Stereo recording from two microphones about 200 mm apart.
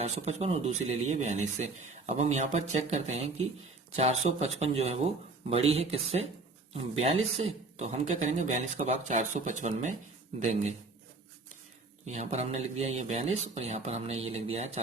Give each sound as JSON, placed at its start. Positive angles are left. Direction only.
{"t": 0.0, "sound": "speech", "side_deg": -35}
{"t": 12.0, "sound": "speech", "side_deg": -35}